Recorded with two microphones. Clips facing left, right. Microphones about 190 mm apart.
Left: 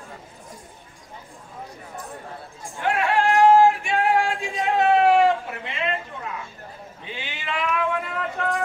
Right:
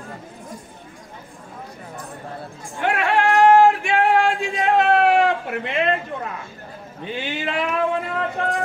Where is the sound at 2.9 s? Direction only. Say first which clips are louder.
Right 2 dB; 65° right (ahead or behind).